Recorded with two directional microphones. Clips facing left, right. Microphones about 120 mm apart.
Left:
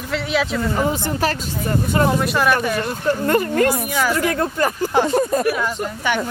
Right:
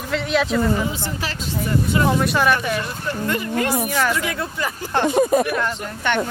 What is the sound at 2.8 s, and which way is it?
Speech, 45° left (ahead or behind).